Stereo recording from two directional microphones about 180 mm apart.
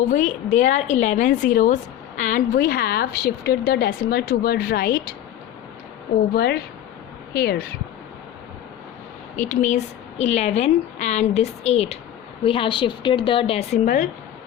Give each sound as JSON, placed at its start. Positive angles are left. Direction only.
{"t": 0.1, "sound": "a woman's voice", "side_deg": 45}
{"t": 6.3, "sound": "a woman's voice", "side_deg": 65}
{"t": 9.3, "sound": "a woman's voice", "side_deg": 45}
{"t": 13.8, "sound": "speech", "side_deg": 50}